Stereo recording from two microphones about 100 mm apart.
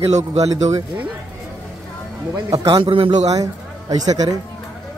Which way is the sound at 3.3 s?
40° right (ahead or behind).